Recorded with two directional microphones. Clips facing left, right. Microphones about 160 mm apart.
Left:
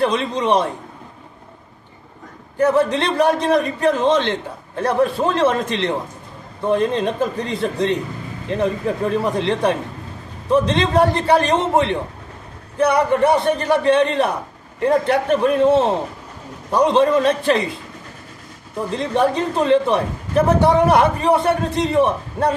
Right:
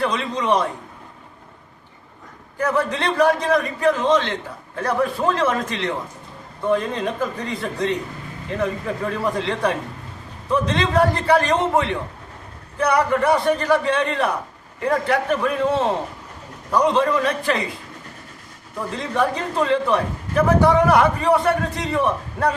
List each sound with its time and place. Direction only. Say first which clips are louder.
0.0 s a man's voice: left 4 dB; 25° left (ahead or behind)
2.6 s a man's voice: left 5 dB; 25° left (ahead or behind)
19.4 s a man's voice: left 4 dB; 20° left (ahead or behind)